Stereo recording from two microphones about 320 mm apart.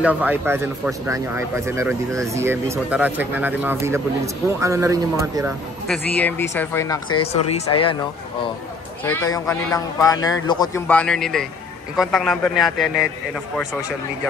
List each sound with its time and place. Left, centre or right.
0.0 s speech: centre
6.1 s speech: centre
9.0 s a man's voice: centre